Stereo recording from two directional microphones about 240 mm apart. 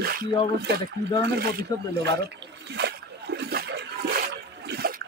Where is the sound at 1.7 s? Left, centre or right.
Centre.